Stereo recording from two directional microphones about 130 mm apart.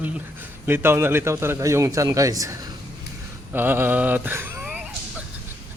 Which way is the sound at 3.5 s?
15° right (ahead or behind).